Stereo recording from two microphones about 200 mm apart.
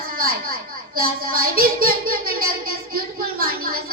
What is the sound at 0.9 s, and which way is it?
A woman's voice, 45° right (ahead or behind).